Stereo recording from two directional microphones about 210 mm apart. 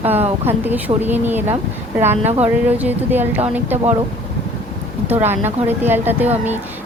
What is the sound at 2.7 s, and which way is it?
Speech, 10° right (ahead or behind).